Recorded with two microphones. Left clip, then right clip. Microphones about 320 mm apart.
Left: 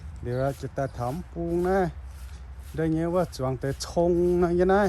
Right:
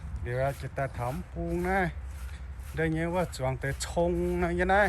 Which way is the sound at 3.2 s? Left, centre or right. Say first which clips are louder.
Left 3 dB; left.